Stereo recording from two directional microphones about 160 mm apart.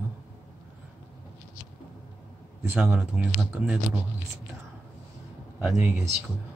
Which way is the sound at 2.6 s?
10° right (ahead or behind).